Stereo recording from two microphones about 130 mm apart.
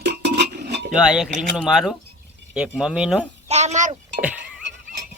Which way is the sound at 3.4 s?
60° right (ahead or behind).